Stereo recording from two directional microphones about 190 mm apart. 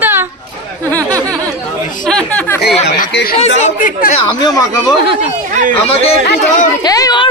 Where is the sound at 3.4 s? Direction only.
40° left (ahead or behind).